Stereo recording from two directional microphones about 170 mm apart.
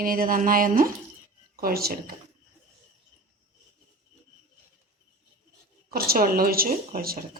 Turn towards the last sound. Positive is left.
turn(degrees=-60)  # may be behind; listen again after turning